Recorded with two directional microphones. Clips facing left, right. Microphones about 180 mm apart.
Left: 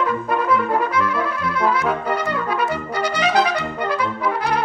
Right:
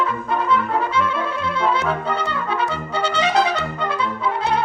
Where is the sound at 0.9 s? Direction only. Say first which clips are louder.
Left 1 dB; 25° right (ahead or behind).